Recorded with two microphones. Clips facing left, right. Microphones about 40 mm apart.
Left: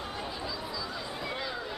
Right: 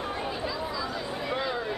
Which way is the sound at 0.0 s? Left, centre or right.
Right.